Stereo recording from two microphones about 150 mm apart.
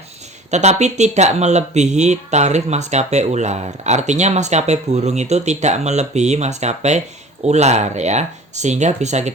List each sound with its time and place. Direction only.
0.5 s speech: 50° right (ahead or behind)